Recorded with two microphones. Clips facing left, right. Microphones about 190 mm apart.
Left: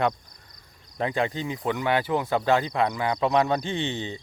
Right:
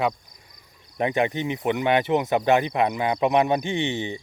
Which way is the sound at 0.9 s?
20° right (ahead or behind).